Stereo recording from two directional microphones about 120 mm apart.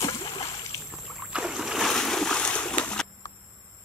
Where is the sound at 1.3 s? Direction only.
5° right (ahead or behind).